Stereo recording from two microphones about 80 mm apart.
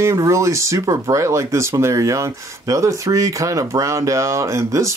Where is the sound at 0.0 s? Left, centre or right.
Right.